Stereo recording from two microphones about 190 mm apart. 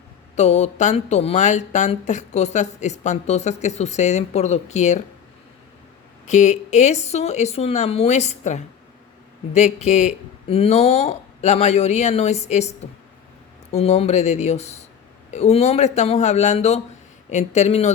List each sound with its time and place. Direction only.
0.3 s speech: 35° left (ahead or behind)
6.2 s speech: 40° left (ahead or behind)